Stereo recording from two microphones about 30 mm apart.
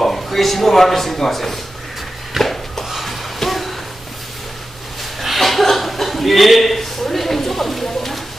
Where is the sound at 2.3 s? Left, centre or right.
Centre.